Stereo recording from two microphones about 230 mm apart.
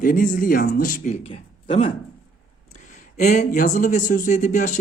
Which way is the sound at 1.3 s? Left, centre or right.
Left.